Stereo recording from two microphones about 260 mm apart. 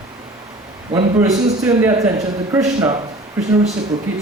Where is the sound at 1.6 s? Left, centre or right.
Centre.